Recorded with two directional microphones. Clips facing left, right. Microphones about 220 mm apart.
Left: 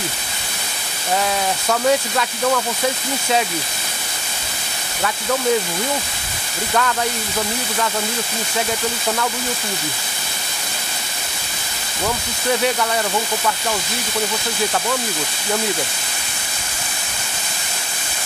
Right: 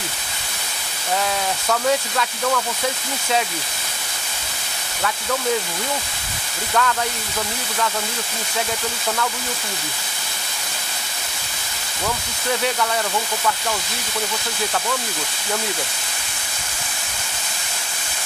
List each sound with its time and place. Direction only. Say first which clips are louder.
1.7 s speech: left 3 dB; 15° left (ahead or behind)
6.7 s speech: left 1 dB; 10° left (ahead or behind)